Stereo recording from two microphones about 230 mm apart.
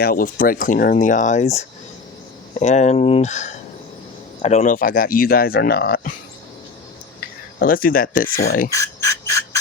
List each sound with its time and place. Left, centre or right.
0.0 s speech: left
7.6 s speech: left
8.7 s insect: centre